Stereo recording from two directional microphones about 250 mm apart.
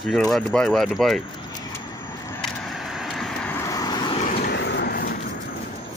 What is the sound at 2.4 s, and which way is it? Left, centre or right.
Vehicle, centre.